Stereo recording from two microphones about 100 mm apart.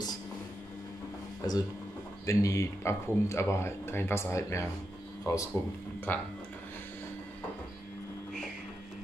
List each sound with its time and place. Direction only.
1.4 s speech: 40° left (ahead or behind)
6.1 s speech: 15° left (ahead or behind)